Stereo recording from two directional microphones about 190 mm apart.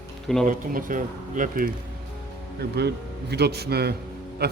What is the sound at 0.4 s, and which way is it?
Speech, 45° right (ahead or behind).